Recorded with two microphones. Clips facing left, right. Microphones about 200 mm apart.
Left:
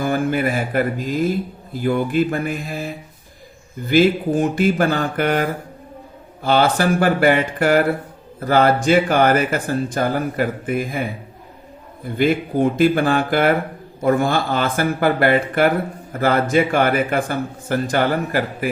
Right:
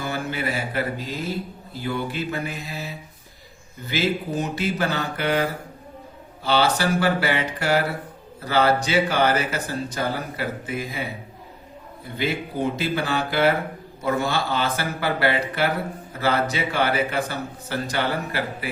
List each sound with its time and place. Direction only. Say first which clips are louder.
0.0 s speech: left 8 dB; 50° left (ahead or behind)